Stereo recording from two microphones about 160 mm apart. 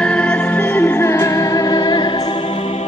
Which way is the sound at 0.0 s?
5° left (ahead or behind).